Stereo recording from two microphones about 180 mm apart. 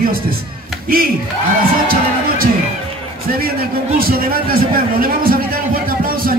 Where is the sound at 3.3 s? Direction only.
55° right (ahead or behind).